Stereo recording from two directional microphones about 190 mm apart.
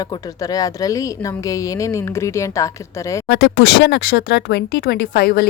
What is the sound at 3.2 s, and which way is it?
Speech, 70° left (ahead or behind).